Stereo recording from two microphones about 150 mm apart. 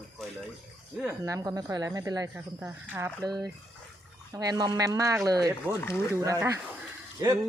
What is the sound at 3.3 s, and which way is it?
Speech, 25° right (ahead or behind).